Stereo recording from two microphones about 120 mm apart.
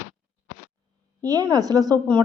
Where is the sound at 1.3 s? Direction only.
30° right (ahead or behind).